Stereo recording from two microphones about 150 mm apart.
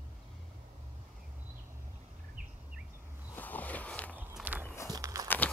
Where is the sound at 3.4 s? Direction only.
10° left (ahead or behind).